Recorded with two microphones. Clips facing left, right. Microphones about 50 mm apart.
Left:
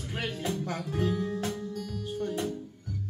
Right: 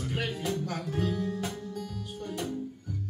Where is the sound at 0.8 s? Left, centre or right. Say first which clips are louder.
Left 1 dB; centre.